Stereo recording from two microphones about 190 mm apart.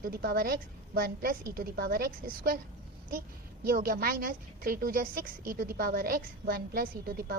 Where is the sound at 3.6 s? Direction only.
50° right (ahead or behind).